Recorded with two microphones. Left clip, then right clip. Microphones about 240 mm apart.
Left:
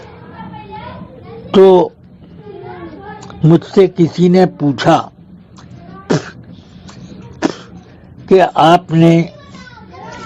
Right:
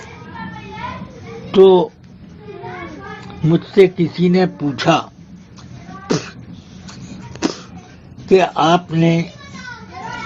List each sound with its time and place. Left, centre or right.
1.5 s a child's voice: left
3.2 s speech: left
6.1 s a sound: left
7.3 s cough: left
8.3 s speech: left